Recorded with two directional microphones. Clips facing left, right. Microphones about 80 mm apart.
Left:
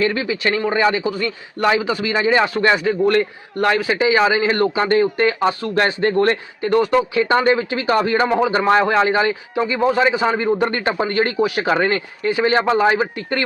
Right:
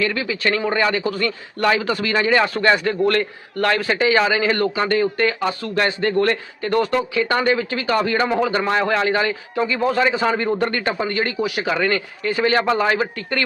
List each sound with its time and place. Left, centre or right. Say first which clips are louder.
0.0 s a man's voice: left 2 dB; left
2.7 s a man's voice: left 2 dB; centre
3.1 s speech: left 3 dB; centre
3.8 s a man's voice: left 1 dB; centre
4.2 s speech: left 2 dB; left
6.7 s speech: left 3 dB; centre
10.7 s speech: left 2 dB; left